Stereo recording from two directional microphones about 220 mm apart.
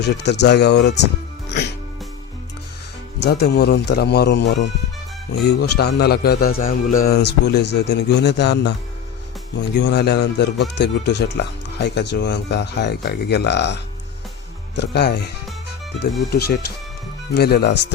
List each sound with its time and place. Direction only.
0.0 s speech: 50° left (ahead or behind)
3.2 s speech: 45° left (ahead or behind)
14.8 s speech: 50° left (ahead or behind)
17.3 s speech: 45° left (ahead or behind)